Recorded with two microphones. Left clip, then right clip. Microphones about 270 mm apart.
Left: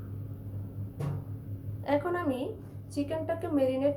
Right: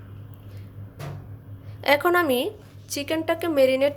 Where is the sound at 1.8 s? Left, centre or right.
Right.